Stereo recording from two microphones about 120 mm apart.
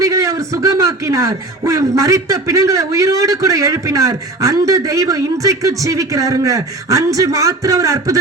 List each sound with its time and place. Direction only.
0.0 s a man's voice: 25° right (ahead or behind)